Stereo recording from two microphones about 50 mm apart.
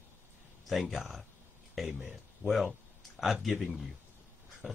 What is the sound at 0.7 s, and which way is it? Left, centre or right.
Speech, centre.